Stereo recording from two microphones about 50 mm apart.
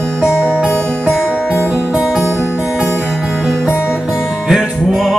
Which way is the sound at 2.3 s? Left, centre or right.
Left.